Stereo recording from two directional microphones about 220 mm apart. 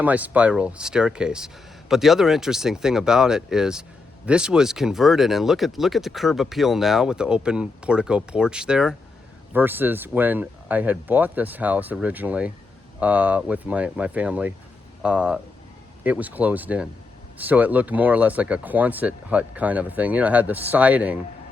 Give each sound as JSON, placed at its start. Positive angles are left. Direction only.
{"t": 0.0, "sound": "speech", "side_deg": -5}